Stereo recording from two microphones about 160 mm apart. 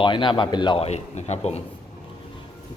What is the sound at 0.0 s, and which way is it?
Speech, 30° left (ahead or behind).